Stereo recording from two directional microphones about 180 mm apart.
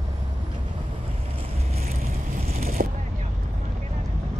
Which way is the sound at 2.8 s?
50° right (ahead or behind).